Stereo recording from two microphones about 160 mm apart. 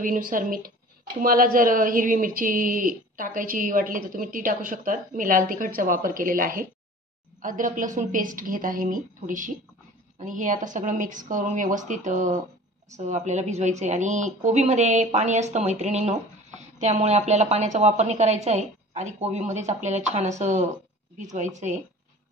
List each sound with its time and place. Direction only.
0.0 s speech: 55° right (ahead or behind)